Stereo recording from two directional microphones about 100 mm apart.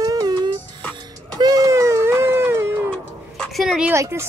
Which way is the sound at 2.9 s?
5° left (ahead or behind).